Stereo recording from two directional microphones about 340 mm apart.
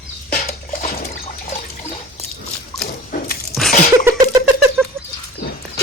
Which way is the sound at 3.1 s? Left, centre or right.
Left.